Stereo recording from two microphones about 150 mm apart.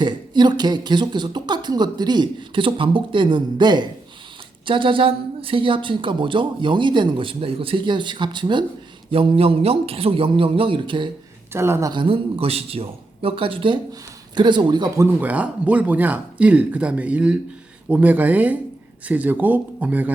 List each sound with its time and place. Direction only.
0.0 s a woman's voice: 30° right (ahead or behind)
11.5 s a woman's voice: 15° right (ahead or behind)